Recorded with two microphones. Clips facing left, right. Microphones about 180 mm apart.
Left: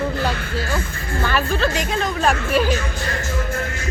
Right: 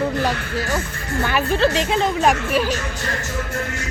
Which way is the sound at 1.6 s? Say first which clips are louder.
Right 3 dB; 25° right (ahead or behind).